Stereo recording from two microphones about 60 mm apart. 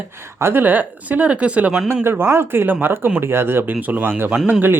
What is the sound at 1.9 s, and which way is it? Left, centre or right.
Speech, right.